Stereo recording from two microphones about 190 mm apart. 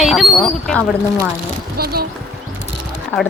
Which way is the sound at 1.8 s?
55° right (ahead or behind).